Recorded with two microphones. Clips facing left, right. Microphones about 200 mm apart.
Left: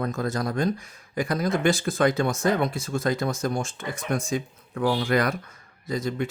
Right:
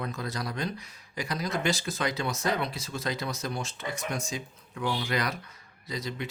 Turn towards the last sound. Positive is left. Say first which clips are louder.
# left 8 dB
turn(degrees=50)  # may be behind; listen again after turning